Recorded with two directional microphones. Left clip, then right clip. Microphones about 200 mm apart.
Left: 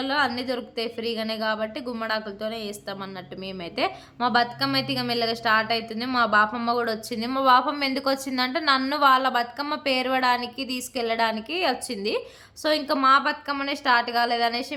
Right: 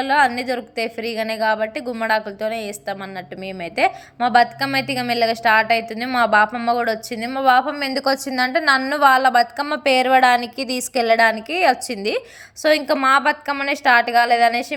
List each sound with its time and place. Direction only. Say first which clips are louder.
0.0 s a woman's voice: right 8 dB; 15° right (ahead or behind)